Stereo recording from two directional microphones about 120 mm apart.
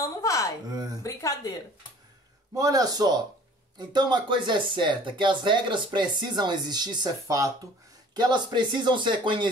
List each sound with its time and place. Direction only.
0.0 s a sound: 25° left (ahead or behind)
0.7 s speech: 35° right (ahead or behind)
1.0 s speech: 30° left (ahead or behind)
2.5 s speech: 30° right (ahead or behind)